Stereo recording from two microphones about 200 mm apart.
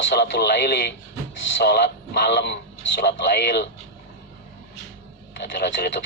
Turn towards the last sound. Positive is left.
turn(degrees=60)  # may be behind; listen again after turning